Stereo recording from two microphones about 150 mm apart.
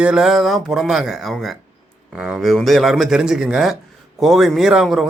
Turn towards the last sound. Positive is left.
turn(degrees=0)  # may be behind; listen again after turning